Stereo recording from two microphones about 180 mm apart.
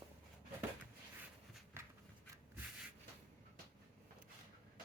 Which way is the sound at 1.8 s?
15° right (ahead or behind).